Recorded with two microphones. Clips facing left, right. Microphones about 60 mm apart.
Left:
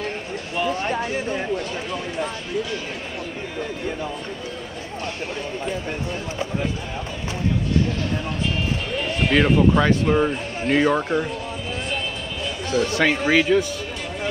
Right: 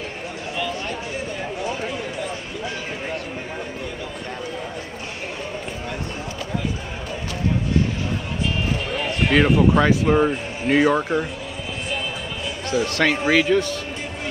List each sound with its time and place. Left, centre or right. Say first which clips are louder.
0.6 s a sound: left 5 dB; left
9.0 s speech: right 1 dB; centre
12.8 s speech: even; centre
13.1 s speech: even; centre
13.4 s speech: even; centre